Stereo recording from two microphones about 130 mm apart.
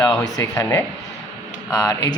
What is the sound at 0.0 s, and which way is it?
Speech, 25° left (ahead or behind).